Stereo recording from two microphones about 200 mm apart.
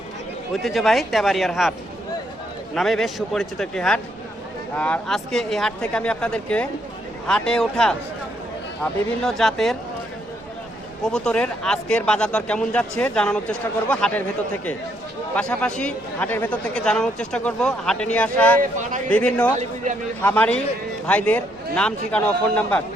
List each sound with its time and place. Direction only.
0.5 s speech: centre (ahead or behind)
2.7 s speech: centre (ahead or behind)
11.0 s speech: 5° left (ahead or behind)
19.5 s speech: 40° right (ahead or behind)
20.2 s a man's voice: 5° left (ahead or behind)